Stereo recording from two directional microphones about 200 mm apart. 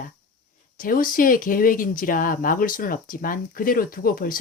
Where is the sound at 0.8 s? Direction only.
45° left (ahead or behind).